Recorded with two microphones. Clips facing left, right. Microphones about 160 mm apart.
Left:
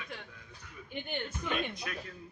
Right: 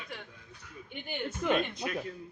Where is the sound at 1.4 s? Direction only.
65° right (ahead or behind).